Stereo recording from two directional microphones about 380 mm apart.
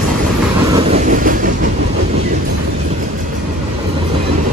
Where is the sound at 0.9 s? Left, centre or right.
Right.